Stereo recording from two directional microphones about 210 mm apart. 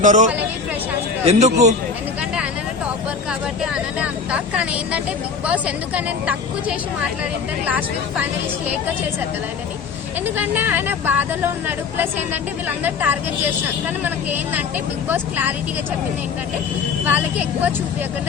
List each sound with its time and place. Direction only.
0.0 s a man's voice: 35° right (ahead or behind)
3.6 s vehicle: 5° right (ahead or behind)
5.5 s a woman's voice: 5° right (ahead or behind)
10.3 s a woman's voice: 10° right (ahead or behind)
17.1 s a woman's voice: 10° right (ahead or behind)